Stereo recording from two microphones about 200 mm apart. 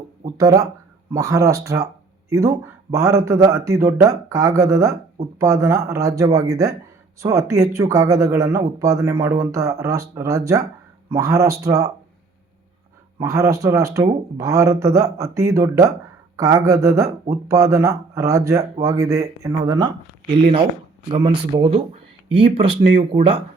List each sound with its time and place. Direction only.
0.3 s speech: 15° right (ahead or behind)
13.2 s speech: 15° right (ahead or behind)
21.1 s speech: 25° right (ahead or behind)